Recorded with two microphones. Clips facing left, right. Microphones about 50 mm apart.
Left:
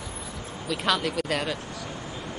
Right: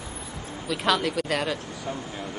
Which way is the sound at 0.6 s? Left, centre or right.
Centre.